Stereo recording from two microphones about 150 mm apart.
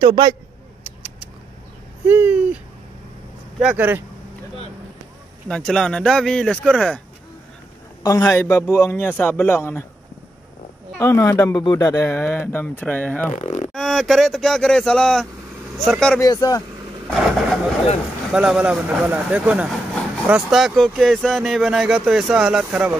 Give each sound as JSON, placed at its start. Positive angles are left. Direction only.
{"t": 0.0, "sound": "speech", "side_deg": -30}
{"t": 2.0, "sound": "speech", "side_deg": -10}
{"t": 5.5, "sound": "speech", "side_deg": 5}
{"t": 8.2, "sound": "speech", "side_deg": 15}
{"t": 11.0, "sound": "speech", "side_deg": 20}
{"t": 13.3, "sound": "speech", "side_deg": 50}
{"t": 13.7, "sound": "speech", "side_deg": 0}
{"t": 16.2, "sound": "speech", "side_deg": 25}
{"t": 17.1, "sound": "a sound", "side_deg": 0}
{"t": 18.3, "sound": "speech", "side_deg": -5}